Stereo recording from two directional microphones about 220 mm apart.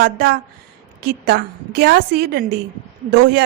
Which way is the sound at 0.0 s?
45° right (ahead or behind).